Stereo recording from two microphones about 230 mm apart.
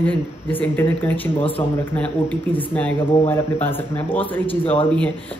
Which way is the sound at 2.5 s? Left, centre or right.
Centre.